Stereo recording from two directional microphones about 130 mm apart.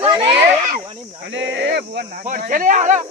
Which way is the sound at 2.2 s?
90° right.